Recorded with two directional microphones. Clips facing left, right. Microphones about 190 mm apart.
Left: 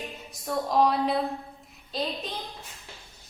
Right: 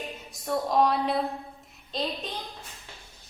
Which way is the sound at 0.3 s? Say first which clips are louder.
Right 1 dB; centre (ahead or behind).